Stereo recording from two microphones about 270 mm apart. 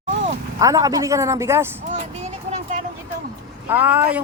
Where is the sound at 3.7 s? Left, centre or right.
Centre.